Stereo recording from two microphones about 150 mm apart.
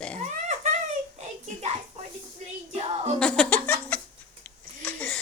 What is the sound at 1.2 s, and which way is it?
Child singing, 50° right (ahead or behind).